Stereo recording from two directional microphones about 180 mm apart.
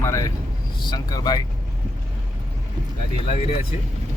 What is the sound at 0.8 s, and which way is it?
Speech, 25° left (ahead or behind).